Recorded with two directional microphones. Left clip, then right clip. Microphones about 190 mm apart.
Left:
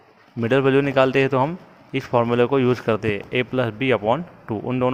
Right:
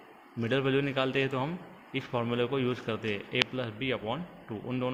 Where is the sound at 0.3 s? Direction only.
55° left (ahead or behind).